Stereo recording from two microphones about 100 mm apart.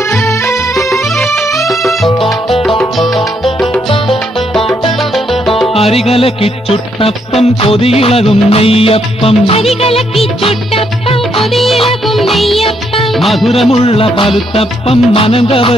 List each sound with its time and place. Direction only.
0.1 s music: 25° left (ahead or behind)
1.0 s music: centre (ahead or behind)
4.9 s music: centre (ahead or behind)
5.7 s music: 80° left
10.2 s music: 75° left (ahead or behind)
11.4 s speech: centre (ahead or behind)
13.7 s music: 75° left (ahead or behind)